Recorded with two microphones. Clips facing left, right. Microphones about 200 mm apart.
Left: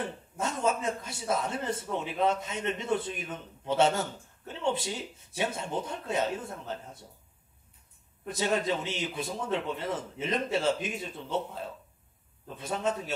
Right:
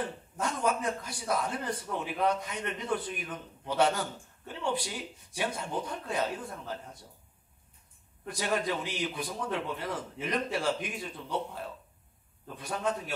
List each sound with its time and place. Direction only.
0.4 s a man's voice: 25° left (ahead or behind)
8.3 s a man's voice: 25° left (ahead or behind)